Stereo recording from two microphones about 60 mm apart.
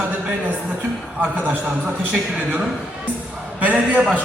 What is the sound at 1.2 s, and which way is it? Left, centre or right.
A man's voice, right.